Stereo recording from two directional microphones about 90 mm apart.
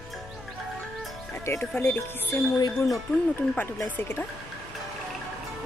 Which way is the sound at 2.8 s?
35° left (ahead or behind).